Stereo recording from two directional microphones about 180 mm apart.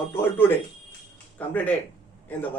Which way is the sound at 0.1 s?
10° left (ahead or behind).